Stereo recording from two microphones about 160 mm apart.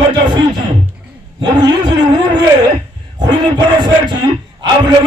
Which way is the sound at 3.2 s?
30° right (ahead or behind).